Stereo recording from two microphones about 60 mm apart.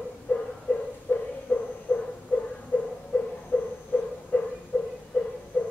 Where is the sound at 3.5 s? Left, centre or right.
Left.